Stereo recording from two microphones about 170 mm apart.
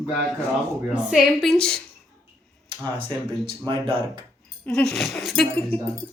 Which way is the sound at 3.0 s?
30° right (ahead or behind).